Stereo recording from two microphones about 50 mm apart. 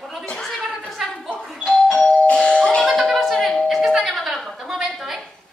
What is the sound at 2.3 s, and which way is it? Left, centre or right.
Doorbell, centre.